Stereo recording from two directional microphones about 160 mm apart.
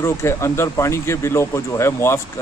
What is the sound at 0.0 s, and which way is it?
Speech, 15° left (ahead or behind).